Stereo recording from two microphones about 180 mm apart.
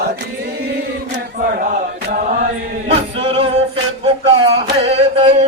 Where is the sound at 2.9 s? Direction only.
30° right (ahead or behind).